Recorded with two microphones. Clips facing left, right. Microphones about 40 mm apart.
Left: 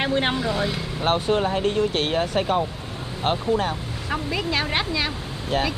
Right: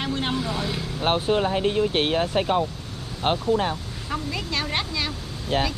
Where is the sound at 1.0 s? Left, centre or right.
Centre.